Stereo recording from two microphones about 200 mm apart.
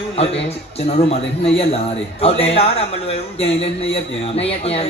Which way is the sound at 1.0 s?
30° left (ahead or behind).